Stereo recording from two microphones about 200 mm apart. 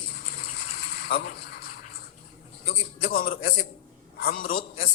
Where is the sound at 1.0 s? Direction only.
55° left (ahead or behind).